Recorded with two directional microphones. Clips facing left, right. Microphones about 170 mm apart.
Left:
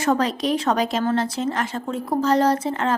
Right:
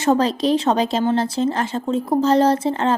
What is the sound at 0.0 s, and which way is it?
A woman's voice, 30° right (ahead or behind).